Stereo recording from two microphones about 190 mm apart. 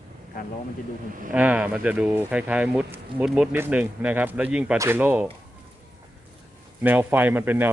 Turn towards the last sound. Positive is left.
turn(degrees=-10)  # may be behind; listen again after turning